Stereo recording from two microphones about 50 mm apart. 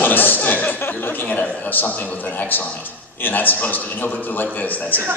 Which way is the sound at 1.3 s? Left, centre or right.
Left.